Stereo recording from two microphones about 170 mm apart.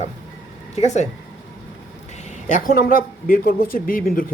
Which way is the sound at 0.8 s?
40° left (ahead or behind).